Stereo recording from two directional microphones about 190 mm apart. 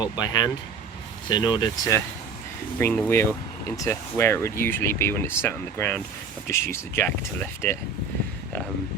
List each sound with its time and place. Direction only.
0.0 s speech: 20° left (ahead or behind)
2.7 s speech: 10° left (ahead or behind)